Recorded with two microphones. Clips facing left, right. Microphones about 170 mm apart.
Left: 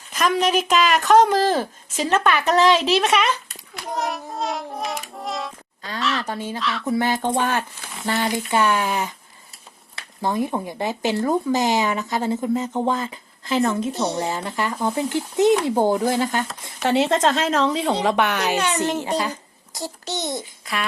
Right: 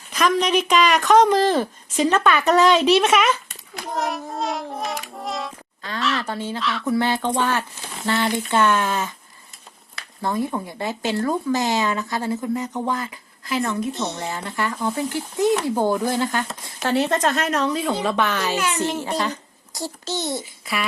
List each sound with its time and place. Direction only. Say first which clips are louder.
0.3 s a woman's voice: even; 5° left (ahead or behind)
3.9 s music: right 1 dB; centre (ahead or behind)
6.0 s a sound: even; centre (ahead or behind)
6.2 s speech: right 1 dB; 15° left (ahead or behind)
6.6 s a woman's voice: even; centre (ahead or behind)
6.8 s speech: even; 15° left (ahead or behind)
10.2 s a child's voice: left 1 dB; 20° left (ahead or behind)
20.4 s babbling: right 1 dB; 5° right (ahead or behind)